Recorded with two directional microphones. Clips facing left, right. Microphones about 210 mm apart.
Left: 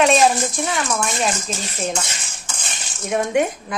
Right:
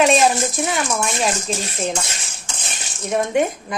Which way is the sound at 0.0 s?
Centre (ahead or behind).